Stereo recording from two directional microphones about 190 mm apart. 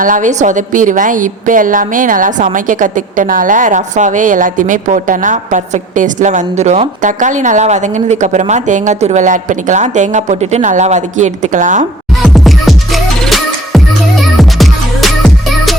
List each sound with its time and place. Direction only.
0.0 s a woman's voice: 45° right (ahead or behind)
12.2 s music: centre (ahead or behind)